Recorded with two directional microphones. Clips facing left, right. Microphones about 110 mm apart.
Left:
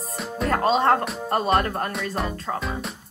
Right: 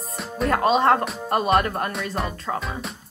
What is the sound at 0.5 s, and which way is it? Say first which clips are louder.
A woman's voice: right 1 dB; 35° left (ahead or behind).